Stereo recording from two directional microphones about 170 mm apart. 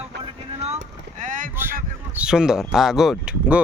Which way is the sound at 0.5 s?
40° right (ahead or behind).